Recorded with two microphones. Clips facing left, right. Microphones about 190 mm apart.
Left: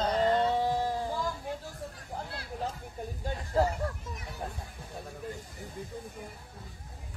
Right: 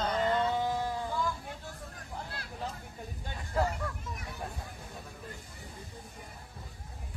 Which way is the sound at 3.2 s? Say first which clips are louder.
Left 4 dB; 35° left (ahead or behind).